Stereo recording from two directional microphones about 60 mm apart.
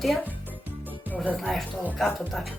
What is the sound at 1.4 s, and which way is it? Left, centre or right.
Speech, centre.